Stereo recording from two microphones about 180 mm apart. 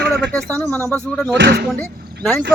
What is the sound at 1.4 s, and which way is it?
Speech, 70° right (ahead or behind).